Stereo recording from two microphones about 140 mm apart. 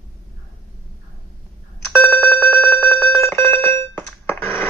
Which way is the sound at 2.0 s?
10° left (ahead or behind).